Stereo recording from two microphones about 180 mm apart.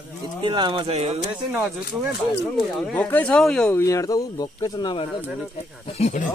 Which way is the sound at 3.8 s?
15° left (ahead or behind).